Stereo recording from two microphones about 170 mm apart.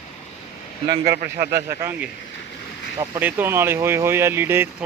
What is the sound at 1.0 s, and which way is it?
Speech, 65° right (ahead or behind).